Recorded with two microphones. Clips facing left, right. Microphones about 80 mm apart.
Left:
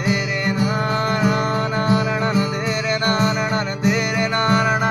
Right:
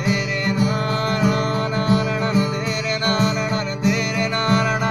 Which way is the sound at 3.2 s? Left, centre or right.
Left.